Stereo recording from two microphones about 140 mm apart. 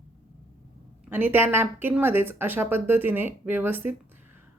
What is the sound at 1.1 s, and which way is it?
Speech, 15° right (ahead or behind).